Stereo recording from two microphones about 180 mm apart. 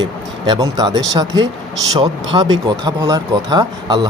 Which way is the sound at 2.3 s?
25° right (ahead or behind).